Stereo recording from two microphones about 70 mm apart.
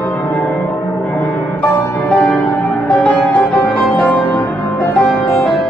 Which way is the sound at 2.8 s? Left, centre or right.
Left.